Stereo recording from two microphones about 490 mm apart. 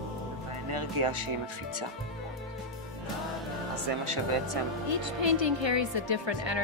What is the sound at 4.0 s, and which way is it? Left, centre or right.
Speech, right.